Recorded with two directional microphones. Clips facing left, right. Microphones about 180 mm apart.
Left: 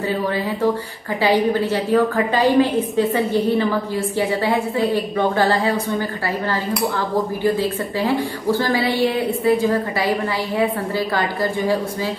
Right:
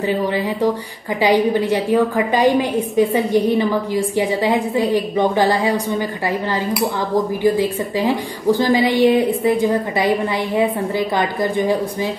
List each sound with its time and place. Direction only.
1.2 s a woman's voice: 15° right (ahead or behind)
7.4 s a woman's voice: 15° right (ahead or behind)